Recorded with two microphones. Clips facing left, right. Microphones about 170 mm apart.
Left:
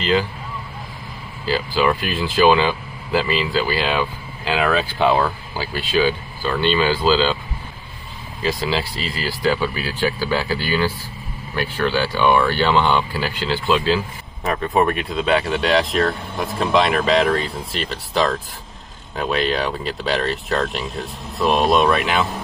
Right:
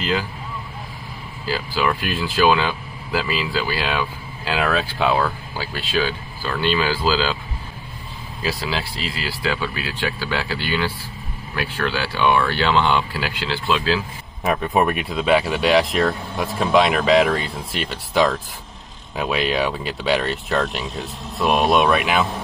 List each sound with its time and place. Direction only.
1.5 s speech: centre (ahead or behind)
8.4 s speech: 5° right (ahead or behind)